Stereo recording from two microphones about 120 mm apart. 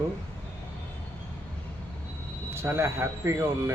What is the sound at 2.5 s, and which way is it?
A man's voice, 20° right (ahead or behind).